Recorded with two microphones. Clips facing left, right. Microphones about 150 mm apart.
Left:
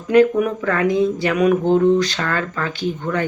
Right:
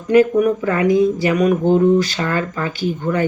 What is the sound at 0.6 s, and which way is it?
Speech, 10° right (ahead or behind).